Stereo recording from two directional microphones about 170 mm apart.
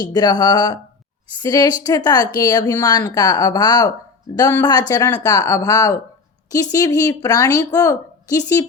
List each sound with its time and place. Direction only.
0.0 s a woman's voice: 25° left (ahead or behind)